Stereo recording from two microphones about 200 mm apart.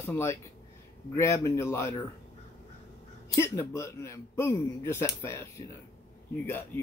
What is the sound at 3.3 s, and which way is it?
Speech, 15° left (ahead or behind).